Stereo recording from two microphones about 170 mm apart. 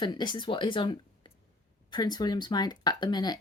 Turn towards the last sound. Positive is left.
turn(degrees=25)  # may be behind; listen again after turning